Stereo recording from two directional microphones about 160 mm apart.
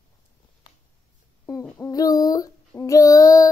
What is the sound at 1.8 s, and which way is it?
Female singing, 25° left (ahead or behind).